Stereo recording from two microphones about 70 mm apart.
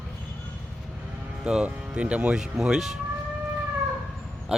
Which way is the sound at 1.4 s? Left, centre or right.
Centre.